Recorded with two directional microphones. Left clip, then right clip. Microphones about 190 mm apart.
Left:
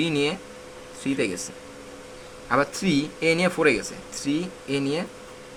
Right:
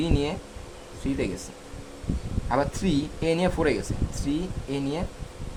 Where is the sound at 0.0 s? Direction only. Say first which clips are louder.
Left 3 dB; 20° right (ahead or behind).